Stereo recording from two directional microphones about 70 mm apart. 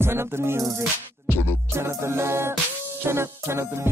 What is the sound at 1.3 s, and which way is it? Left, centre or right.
Music, left.